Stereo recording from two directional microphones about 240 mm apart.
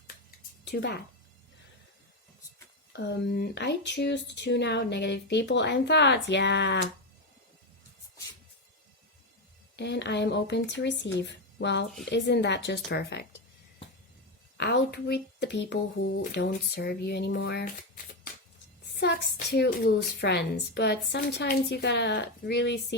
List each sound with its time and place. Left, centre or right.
0.3 s a sound: left
2.9 s speech: left
9.7 s speech: left
14.6 s speech: left